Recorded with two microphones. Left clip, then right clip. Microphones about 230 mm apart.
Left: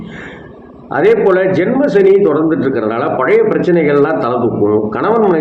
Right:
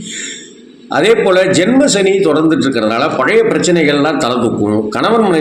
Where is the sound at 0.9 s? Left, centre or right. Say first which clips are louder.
Even; right.